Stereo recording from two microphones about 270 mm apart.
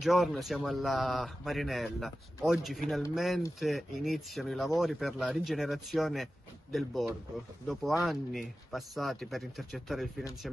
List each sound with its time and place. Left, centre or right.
0.0 s speech: centre